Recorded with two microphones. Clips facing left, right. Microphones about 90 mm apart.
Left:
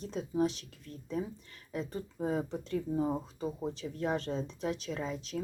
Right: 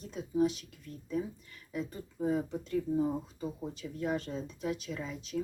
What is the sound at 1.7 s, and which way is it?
Speech, 40° left (ahead or behind).